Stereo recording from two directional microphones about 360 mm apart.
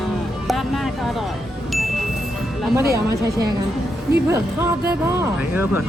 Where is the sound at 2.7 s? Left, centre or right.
Centre.